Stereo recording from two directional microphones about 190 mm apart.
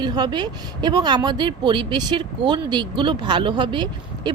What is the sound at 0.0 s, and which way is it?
Speech, 25° right (ahead or behind).